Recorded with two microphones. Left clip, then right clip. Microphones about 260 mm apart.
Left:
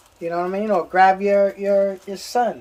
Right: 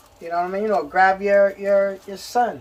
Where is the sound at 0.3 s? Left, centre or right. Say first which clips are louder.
Even; left.